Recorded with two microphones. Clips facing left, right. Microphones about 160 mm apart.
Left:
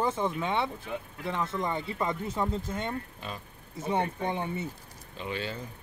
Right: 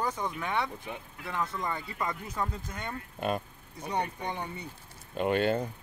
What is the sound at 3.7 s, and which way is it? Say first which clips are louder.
Speech: left 3 dB; 25° left (ahead or behind).